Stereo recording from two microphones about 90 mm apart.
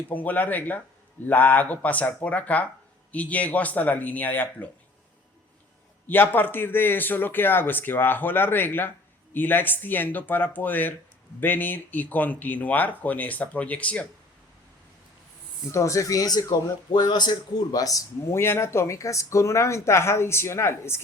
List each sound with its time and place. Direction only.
0.1 s speech: 20° left (ahead or behind)
6.1 s speech: 20° left (ahead or behind)
15.7 s a man's voice: 35° left (ahead or behind)
18.3 s speech: 30° left (ahead or behind)